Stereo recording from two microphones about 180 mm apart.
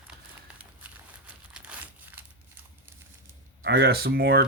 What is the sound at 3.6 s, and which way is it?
Speech, 65° right (ahead or behind).